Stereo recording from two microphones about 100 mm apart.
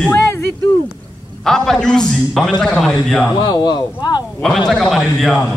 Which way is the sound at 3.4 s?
45° left (ahead or behind).